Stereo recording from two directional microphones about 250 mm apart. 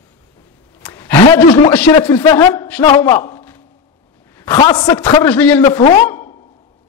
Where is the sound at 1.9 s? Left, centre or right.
Centre.